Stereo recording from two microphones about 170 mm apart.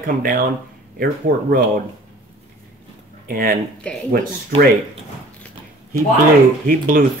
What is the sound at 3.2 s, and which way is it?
Speech, 55° right (ahead or behind).